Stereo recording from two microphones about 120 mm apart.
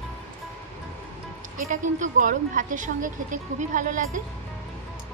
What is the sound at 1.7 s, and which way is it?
A woman's voice, 90° right.